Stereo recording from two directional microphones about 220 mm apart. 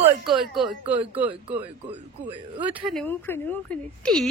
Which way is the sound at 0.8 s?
25° right (ahead or behind).